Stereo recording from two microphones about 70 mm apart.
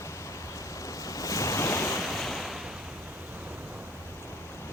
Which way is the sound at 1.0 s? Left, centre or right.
Left.